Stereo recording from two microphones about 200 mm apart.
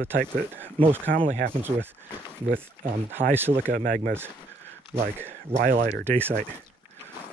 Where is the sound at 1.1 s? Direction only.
40° right (ahead or behind).